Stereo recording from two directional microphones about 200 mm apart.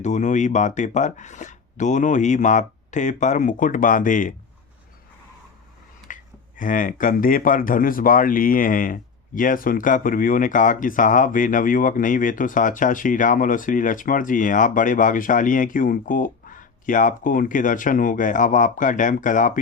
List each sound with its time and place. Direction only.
0.0 s speech: 35° left (ahead or behind)
6.1 s a sound: 40° left (ahead or behind)
6.6 s speech: 40° left (ahead or behind)